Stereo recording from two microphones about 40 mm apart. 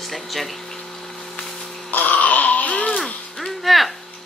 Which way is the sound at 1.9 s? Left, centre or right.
Left.